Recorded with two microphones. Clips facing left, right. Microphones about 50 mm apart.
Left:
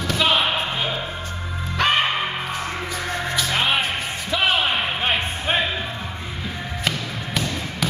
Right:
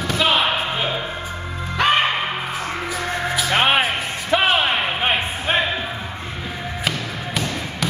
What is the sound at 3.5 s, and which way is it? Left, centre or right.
Music, right.